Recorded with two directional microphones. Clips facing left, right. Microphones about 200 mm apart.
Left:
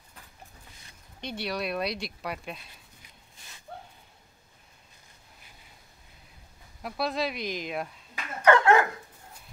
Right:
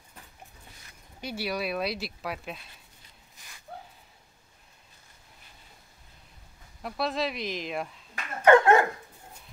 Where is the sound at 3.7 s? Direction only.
5° right (ahead or behind).